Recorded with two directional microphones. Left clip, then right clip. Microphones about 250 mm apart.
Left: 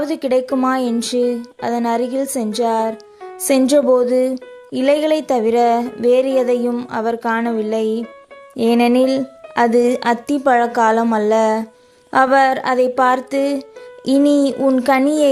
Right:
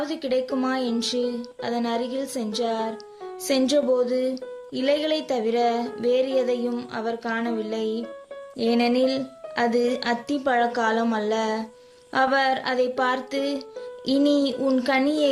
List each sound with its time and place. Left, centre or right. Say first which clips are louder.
0.0 s music: left 8 dB; left